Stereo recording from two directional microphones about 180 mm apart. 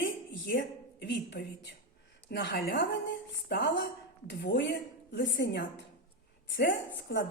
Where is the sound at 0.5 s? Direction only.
75° left (ahead or behind).